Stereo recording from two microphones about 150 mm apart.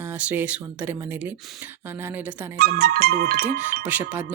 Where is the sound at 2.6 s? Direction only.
90° right.